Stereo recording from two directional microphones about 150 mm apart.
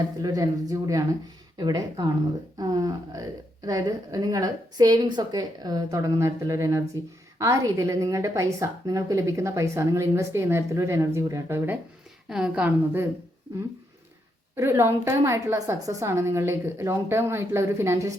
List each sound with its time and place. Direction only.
0.2 s a woman's voice: 25° right (ahead or behind)
14.5 s a woman's voice: 15° right (ahead or behind)